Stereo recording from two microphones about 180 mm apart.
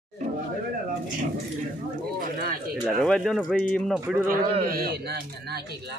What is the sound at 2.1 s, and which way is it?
Speech, 55° right (ahead or behind).